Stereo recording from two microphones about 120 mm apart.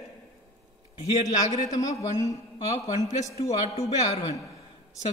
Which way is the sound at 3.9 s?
35° left (ahead or behind).